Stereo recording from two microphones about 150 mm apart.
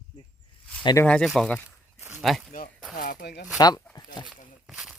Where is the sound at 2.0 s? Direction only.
15° right (ahead or behind).